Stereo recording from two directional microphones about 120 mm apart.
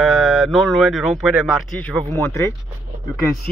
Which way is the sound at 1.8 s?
10° left (ahead or behind).